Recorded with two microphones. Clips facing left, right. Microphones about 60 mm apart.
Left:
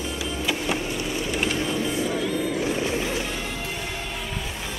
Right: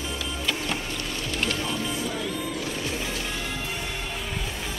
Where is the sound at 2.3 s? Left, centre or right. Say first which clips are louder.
Left 6 dB; left.